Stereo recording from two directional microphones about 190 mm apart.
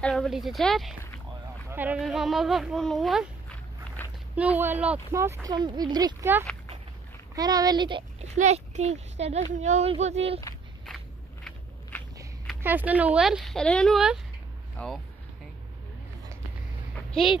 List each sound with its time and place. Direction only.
0.0 s speech: centre (ahead or behind)
4.0 s a sound: 10° left (ahead or behind)
4.4 s speech: 10° right (ahead or behind)
7.3 s speech: 20° right (ahead or behind)
12.6 s speech: 10° right (ahead or behind); by 14.9 s 10° left (ahead or behind)
16.9 s a sound: centre (ahead or behind)